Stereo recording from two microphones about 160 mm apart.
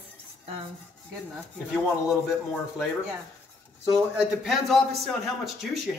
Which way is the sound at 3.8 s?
Centre (ahead or behind).